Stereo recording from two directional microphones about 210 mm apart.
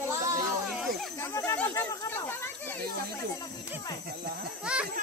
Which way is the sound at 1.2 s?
15° left (ahead or behind).